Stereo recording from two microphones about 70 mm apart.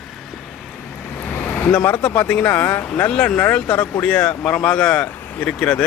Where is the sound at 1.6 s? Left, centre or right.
Left.